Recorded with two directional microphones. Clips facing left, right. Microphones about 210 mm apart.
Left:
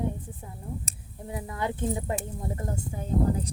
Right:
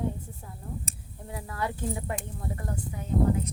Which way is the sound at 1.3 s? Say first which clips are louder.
Left 2 dB; 20° left (ahead or behind).